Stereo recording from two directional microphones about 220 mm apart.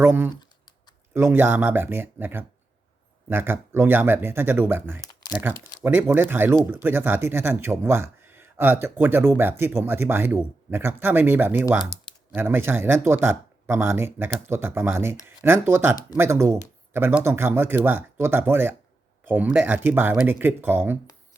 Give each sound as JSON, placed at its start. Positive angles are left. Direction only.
{"t": 0.0, "sound": "speech", "side_deg": -10}
{"t": 0.3, "sound": "typing", "side_deg": 20}
{"t": 1.1, "sound": "speech", "side_deg": -10}